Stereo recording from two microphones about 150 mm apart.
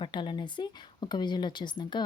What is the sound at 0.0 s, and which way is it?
Speech, 30° left (ahead or behind).